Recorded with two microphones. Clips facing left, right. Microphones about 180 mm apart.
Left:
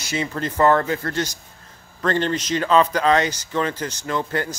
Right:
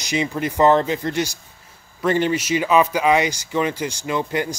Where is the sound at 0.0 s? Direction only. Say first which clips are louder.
Right 3 dB; 15° right (ahead or behind).